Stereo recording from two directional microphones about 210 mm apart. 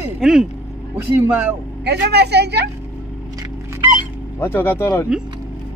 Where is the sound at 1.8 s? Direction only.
50° right (ahead or behind).